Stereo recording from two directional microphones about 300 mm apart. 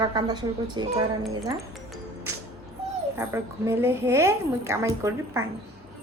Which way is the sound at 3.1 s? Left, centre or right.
Centre.